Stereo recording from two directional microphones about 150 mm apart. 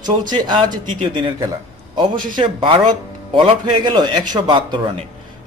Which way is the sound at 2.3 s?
35° right (ahead or behind).